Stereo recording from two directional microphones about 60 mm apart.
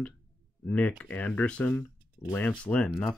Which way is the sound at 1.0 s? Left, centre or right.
Left.